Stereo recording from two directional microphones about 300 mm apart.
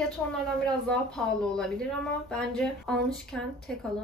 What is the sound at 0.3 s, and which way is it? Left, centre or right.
Speech, centre.